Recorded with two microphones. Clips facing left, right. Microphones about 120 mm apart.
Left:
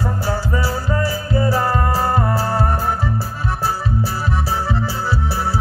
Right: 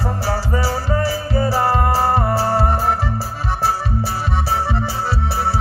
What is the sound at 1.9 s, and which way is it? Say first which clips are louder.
Music: right 2 dB; 30° right (ahead or behind).